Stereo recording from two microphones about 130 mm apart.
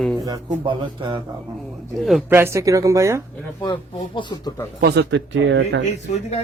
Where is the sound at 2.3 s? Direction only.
20° right (ahead or behind).